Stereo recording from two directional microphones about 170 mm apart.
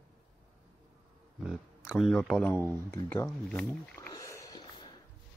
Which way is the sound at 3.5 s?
15° left (ahead or behind).